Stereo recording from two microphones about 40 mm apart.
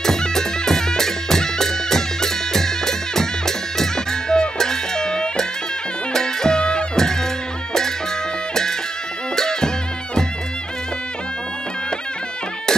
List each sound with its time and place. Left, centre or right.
0.0 s music: centre
9.3 s music: centre